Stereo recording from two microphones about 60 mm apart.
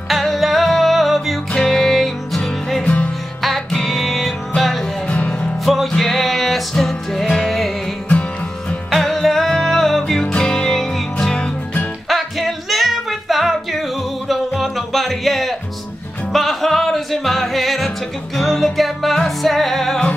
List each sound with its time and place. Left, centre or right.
0.1 s music: centre
1.5 s music: centre
2.8 s music: left
3.4 s music: centre
5.0 s music: left
5.6 s music: centre
8.1 s music: left
8.9 s music: centre
12.1 s music: centre